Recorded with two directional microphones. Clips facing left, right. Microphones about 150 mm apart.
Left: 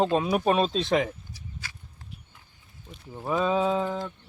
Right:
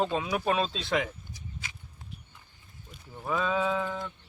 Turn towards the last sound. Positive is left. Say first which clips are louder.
# left 4 dB
turn(degrees=30)  # may be behind; listen again after turning